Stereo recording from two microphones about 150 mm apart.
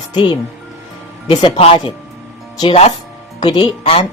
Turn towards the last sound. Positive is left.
turn(degrees=35)  # may be behind; listen again after turning